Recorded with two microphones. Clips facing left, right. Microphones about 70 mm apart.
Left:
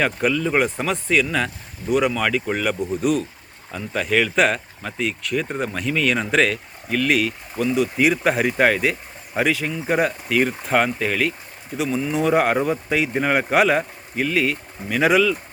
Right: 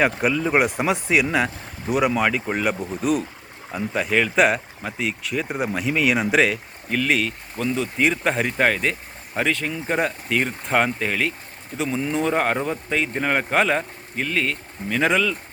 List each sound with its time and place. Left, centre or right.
0.0 s speech: centre
3.7 s speech: centre
4.0 s speech: centre